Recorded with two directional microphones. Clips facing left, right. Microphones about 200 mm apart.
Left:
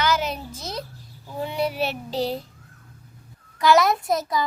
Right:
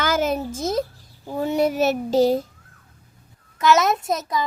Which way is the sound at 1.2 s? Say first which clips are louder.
Right 6 dB; 45° right (ahead or behind).